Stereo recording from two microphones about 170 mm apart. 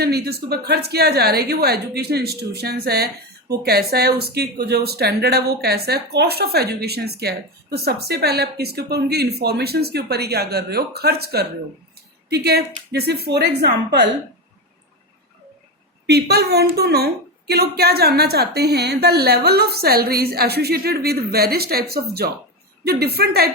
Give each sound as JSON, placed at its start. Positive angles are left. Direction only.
{"t": 0.0, "sound": "a woman's voice", "side_deg": -70}
{"t": 16.0, "sound": "speech", "side_deg": -70}